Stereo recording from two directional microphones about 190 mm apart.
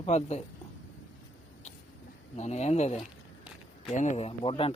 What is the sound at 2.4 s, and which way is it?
Speech, 35° left (ahead or behind).